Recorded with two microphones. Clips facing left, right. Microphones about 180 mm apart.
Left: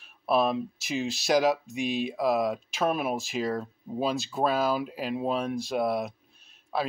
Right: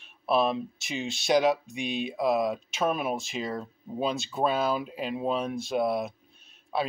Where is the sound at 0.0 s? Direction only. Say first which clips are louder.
Even; centre (ahead or behind).